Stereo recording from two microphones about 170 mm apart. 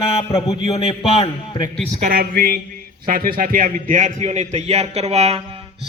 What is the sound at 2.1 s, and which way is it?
A man's voice, 60° right (ahead or behind).